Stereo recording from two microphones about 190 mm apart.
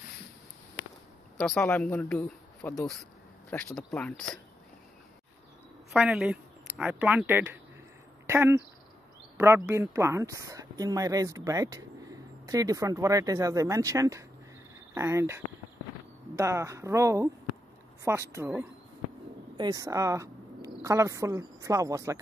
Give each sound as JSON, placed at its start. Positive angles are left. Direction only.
{"t": 1.8, "sound": "speech", "side_deg": 5}
{"t": 5.9, "sound": "speech", "side_deg": -5}